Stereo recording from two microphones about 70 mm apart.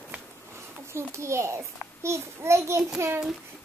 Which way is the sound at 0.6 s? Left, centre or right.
Right.